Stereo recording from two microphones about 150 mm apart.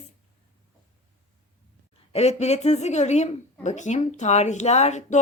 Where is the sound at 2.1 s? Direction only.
45° left (ahead or behind).